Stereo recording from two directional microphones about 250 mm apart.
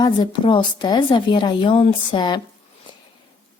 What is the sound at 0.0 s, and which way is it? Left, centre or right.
Speech, centre.